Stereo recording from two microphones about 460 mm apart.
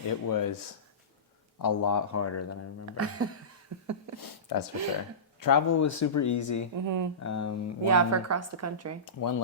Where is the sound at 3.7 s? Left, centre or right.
Right.